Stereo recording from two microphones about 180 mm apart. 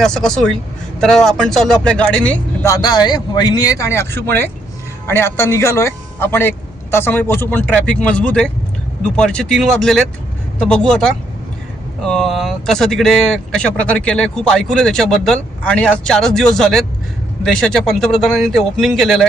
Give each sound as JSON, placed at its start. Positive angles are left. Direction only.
{"t": 0.0, "sound": "speech", "side_deg": 5}
{"t": 2.7, "sound": "speech", "side_deg": 20}